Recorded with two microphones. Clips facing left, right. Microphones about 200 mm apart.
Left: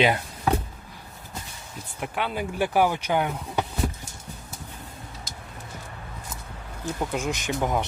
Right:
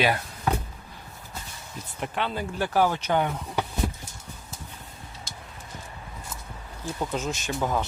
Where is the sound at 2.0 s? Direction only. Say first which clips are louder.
Left 1 dB; 10° left (ahead or behind).